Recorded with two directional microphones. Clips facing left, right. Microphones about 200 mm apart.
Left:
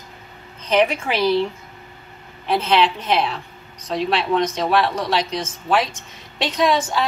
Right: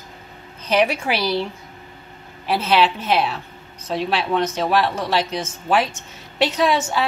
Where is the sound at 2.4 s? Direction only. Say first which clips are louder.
Even; 5° right (ahead or behind).